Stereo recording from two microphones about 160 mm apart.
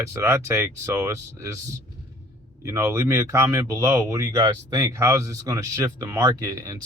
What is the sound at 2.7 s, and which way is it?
Speech, 20° right (ahead or behind).